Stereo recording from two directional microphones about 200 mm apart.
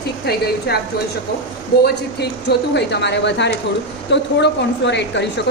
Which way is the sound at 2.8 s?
60° left (ahead or behind).